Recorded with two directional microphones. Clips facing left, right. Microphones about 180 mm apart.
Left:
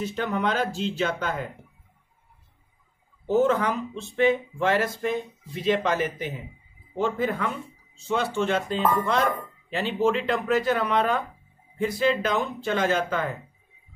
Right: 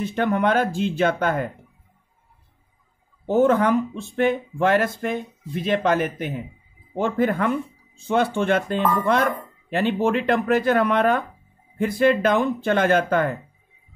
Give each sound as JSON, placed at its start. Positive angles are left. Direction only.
{"t": 0.0, "sound": "speech", "side_deg": -55}
{"t": 3.3, "sound": "speech", "side_deg": -55}